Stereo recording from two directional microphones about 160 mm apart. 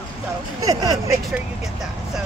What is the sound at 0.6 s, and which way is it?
Speech, 25° right (ahead or behind).